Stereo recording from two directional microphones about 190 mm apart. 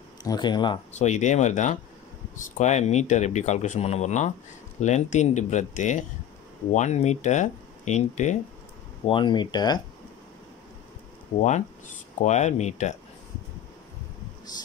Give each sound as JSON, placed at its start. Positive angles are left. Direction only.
{"t": 0.2, "sound": "speech", "side_deg": 20}
{"t": 0.9, "sound": "speech", "side_deg": 35}
{"t": 9.0, "sound": "speech", "side_deg": 25}
{"t": 12.2, "sound": "speech", "side_deg": 40}